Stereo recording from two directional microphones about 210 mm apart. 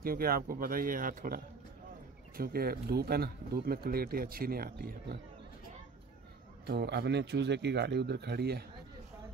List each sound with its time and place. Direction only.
0.0 s speech: 45° right (ahead or behind)
6.6 s speech: 50° right (ahead or behind)